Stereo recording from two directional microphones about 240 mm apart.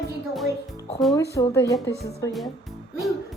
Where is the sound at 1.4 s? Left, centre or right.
Centre.